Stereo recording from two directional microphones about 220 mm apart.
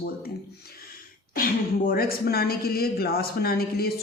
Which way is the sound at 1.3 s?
40° left (ahead or behind).